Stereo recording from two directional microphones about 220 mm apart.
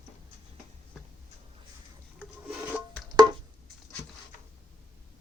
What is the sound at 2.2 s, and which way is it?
Rub, 5° right (ahead or behind).